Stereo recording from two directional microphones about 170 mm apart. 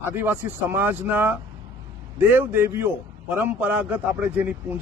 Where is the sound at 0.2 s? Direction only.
15° right (ahead or behind).